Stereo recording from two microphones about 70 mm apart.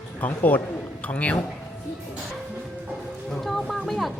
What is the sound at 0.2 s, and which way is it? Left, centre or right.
A man's voice, left.